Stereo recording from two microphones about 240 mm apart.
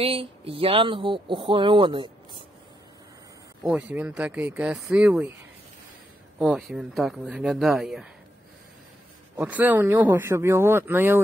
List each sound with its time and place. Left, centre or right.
0.0 s speech: right
3.6 s speech: centre
6.4 s speech: centre
9.4 s speech: centre